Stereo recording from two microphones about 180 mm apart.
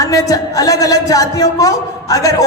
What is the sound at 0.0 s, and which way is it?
A woman's voice, 20° left (ahead or behind).